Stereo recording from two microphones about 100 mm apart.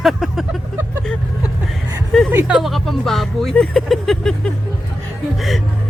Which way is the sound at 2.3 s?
20° right (ahead or behind).